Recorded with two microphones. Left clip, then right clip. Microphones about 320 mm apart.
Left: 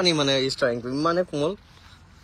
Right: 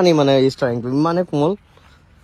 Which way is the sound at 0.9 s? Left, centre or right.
Right.